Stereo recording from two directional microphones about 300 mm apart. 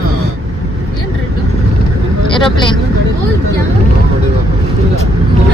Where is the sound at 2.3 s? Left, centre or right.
Centre.